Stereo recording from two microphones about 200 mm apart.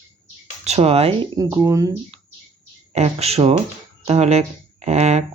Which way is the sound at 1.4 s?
15° right (ahead or behind).